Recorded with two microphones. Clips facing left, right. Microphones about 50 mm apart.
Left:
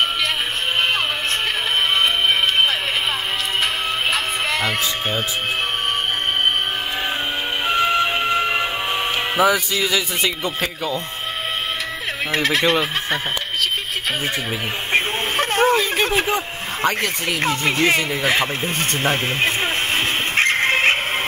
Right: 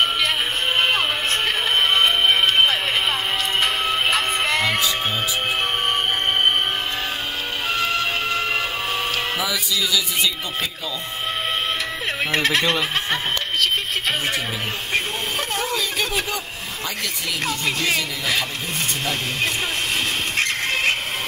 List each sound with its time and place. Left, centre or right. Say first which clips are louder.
2.0 s music: even; centre
7.6 s music: left 5 dB; centre
9.4 s speech: left 6 dB; left
12.3 s speech: left 2 dB; centre
14.9 s speech: left 5 dB; left
19.0 s music: left 6 dB; left